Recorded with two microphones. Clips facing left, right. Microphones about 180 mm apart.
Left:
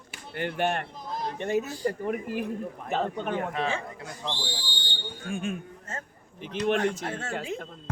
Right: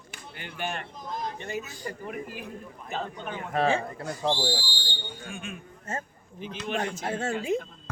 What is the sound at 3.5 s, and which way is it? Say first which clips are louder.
Speech: right 5 dB; 45° right (ahead or behind).